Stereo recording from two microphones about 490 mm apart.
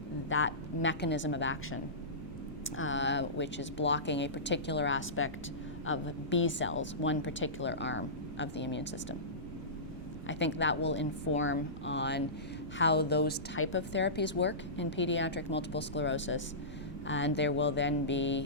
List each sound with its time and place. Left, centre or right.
0.3 s a woman's voice: left
10.2 s a woman's voice: left